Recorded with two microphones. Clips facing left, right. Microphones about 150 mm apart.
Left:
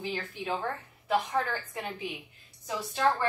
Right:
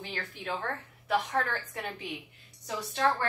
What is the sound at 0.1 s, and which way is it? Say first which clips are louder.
A woman's voice: even; 10° left (ahead or behind).